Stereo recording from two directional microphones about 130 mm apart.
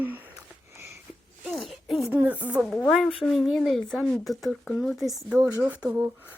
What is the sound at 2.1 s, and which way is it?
Speech, 10° right (ahead or behind).